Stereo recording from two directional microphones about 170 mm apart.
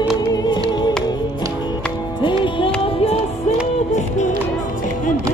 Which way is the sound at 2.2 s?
30° left (ahead or behind).